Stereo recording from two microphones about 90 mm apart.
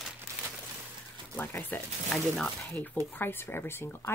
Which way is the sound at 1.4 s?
20° left (ahead or behind).